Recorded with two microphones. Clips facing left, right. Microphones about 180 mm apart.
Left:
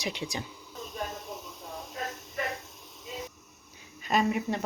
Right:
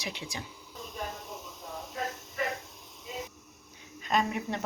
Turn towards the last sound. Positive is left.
turn(degrees=5)  # may be behind; listen again after turning